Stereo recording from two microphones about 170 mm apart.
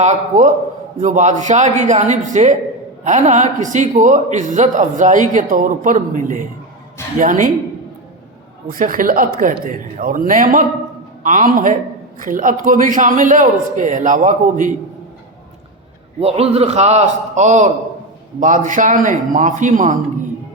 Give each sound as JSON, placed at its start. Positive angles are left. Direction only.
{"t": 0.0, "sound": "a man's voice", "side_deg": -45}
{"t": 8.6, "sound": "a man's voice", "side_deg": -55}
{"t": 16.2, "sound": "a man's voice", "side_deg": -35}